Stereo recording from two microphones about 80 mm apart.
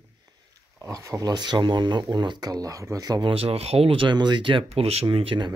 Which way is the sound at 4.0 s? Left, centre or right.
Right.